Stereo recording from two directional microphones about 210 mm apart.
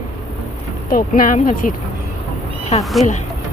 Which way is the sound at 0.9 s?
40° left (ahead or behind).